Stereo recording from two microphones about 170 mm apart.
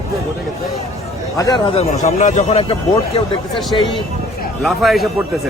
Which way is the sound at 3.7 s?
25° left (ahead or behind).